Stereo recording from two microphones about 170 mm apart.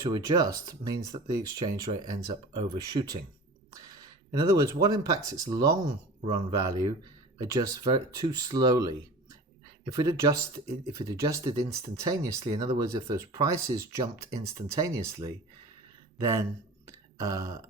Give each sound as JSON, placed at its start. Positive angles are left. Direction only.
{"t": 0.0, "sound": "speech", "side_deg": -20}